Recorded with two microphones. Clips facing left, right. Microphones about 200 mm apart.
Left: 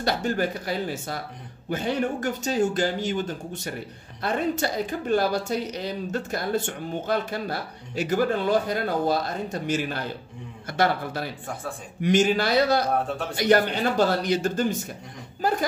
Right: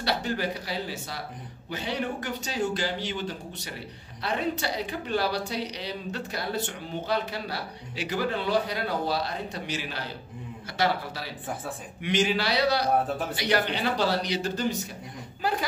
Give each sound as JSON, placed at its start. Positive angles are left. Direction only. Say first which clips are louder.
{"t": 0.0, "sound": "a woman's voice", "louder": "left 4 dB", "side_deg": 50}